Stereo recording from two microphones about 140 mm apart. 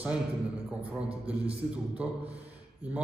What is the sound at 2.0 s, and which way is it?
Speech, 10° right (ahead or behind).